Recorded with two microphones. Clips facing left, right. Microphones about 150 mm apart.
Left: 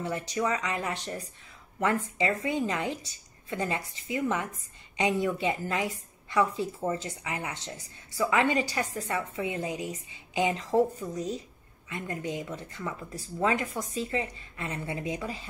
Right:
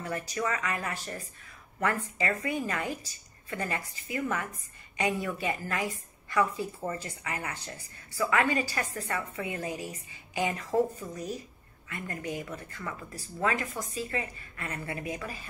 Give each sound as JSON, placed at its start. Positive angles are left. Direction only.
{"t": 0.3, "sound": "a woman's voice", "side_deg": 20}